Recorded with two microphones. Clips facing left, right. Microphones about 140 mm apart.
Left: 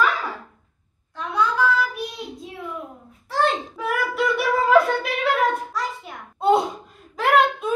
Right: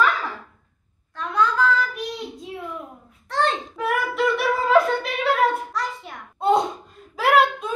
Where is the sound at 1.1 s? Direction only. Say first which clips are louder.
Right 1 dB; 10° left (ahead or behind).